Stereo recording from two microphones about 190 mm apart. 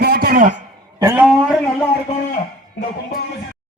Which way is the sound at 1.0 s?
15° right (ahead or behind).